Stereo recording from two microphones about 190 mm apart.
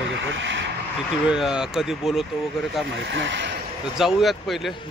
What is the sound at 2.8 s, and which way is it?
Speech, 75° right (ahead or behind).